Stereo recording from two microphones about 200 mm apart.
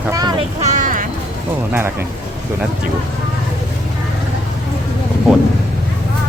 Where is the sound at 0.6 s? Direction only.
35° right (ahead or behind).